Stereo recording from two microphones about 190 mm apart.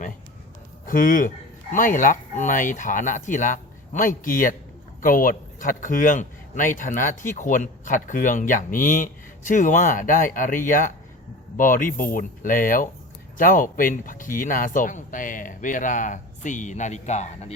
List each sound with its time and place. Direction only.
0.9 s speech: 45° left (ahead or behind)